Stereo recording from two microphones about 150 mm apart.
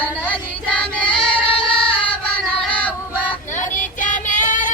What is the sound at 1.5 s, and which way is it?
Music, 35° left (ahead or behind).